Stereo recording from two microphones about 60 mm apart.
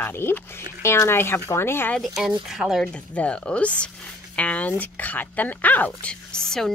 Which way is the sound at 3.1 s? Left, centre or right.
Centre.